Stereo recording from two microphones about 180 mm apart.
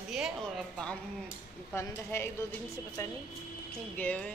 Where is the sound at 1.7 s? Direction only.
10° left (ahead or behind).